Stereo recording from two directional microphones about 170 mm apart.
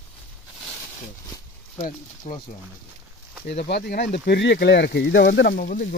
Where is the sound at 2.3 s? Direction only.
45° left (ahead or behind).